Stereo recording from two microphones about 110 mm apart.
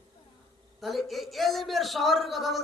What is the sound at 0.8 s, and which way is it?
A man's voice, centre (ahead or behind).